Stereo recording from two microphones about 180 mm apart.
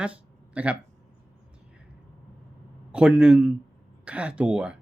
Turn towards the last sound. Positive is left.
turn(degrees=-5)  # may be behind; listen again after turning